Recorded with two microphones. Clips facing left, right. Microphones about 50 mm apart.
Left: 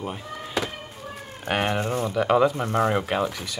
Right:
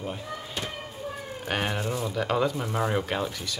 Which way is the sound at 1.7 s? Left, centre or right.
Left.